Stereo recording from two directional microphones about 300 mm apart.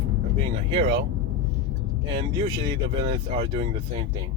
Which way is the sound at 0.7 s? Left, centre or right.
Centre.